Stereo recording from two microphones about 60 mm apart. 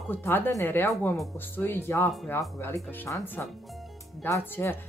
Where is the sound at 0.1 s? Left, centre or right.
Left.